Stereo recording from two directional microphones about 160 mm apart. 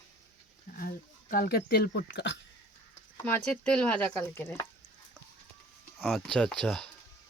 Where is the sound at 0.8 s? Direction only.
60° left (ahead or behind); by 2.4 s 90° left.